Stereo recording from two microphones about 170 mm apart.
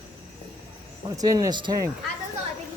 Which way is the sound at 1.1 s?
20° right (ahead or behind).